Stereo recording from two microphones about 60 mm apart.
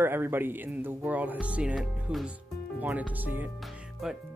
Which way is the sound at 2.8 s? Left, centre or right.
Right.